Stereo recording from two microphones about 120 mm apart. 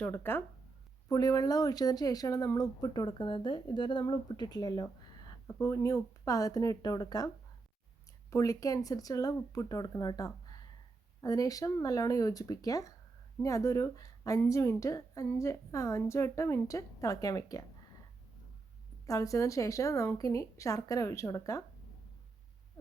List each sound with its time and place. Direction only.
0.0 s speech: 20° left (ahead or behind)
1.0 s speech: 30° left (ahead or behind)
5.5 s a woman's voice: 20° left (ahead or behind)
8.3 s a woman's voice: 30° left (ahead or behind)
19.0 s a woman's voice: 25° left (ahead or behind)